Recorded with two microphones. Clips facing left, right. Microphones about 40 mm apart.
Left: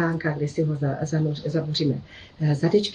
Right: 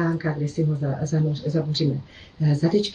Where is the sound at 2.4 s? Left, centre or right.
Left.